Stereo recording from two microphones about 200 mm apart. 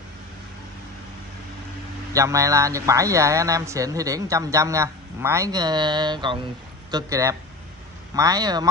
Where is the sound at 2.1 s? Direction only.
15° right (ahead or behind).